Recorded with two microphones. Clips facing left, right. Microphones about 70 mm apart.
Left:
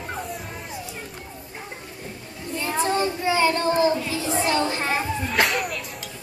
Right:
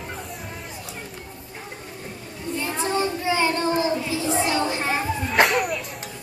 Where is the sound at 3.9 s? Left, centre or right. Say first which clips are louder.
Even; centre.